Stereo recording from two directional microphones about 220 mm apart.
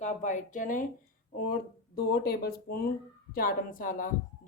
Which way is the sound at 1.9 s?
45° left (ahead or behind).